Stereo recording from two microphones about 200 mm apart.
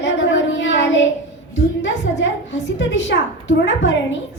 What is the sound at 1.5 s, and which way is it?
A woman's voice, 60° left (ahead or behind).